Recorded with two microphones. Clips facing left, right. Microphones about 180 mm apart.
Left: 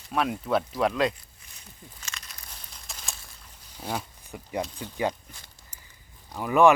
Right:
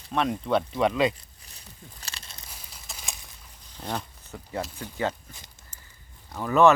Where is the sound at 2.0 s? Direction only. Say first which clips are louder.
Even; 30° right (ahead or behind).